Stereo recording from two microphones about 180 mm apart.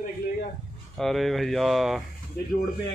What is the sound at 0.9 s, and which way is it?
Speech, centre (ahead or behind).